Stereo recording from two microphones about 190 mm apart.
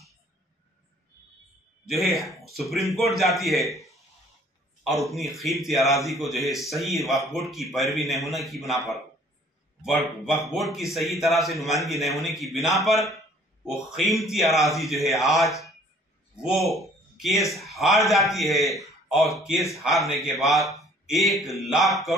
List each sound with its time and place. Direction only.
1.9 s speech: centre (ahead or behind)
13.7 s a man's voice: centre (ahead or behind)